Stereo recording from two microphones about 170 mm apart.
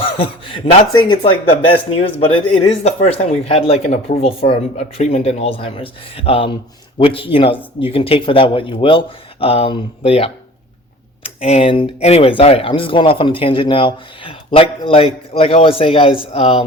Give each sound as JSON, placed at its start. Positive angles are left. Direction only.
{"t": 0.0, "sound": "speech", "side_deg": 30}
{"t": 11.3, "sound": "speech", "side_deg": 35}